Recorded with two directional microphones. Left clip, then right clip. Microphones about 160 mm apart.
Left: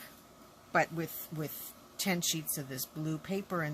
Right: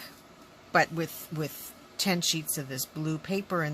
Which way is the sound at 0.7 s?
15° right (ahead or behind).